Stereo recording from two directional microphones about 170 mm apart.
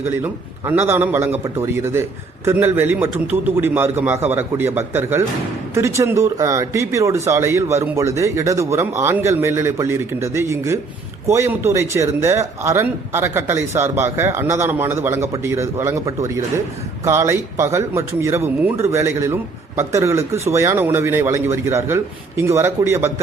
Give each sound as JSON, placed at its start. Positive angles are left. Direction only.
{"t": 0.0, "sound": "speech", "side_deg": -15}